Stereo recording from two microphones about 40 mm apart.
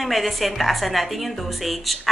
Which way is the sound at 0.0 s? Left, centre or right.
Centre.